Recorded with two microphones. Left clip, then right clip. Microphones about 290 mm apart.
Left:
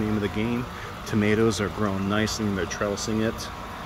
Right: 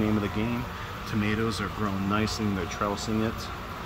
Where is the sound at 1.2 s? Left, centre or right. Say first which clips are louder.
Left 7 dB; centre.